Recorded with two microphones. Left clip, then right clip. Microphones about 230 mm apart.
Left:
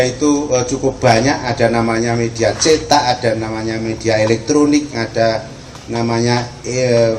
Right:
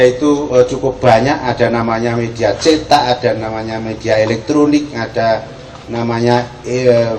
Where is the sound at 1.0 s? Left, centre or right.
Left.